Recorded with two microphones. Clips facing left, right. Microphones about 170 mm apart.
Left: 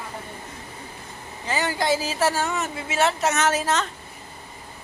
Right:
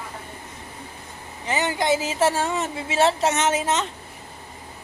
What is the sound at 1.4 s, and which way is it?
A woman's voice, 20° right (ahead or behind).